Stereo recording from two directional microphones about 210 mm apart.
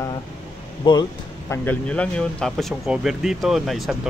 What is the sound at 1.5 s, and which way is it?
Speech, 5° left (ahead or behind).